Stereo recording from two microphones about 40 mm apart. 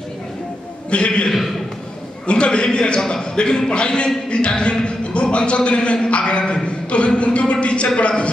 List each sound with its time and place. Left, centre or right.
0.8 s a man's voice: left